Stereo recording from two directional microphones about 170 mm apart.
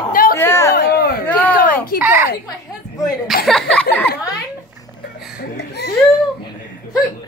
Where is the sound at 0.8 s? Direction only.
70° left (ahead or behind).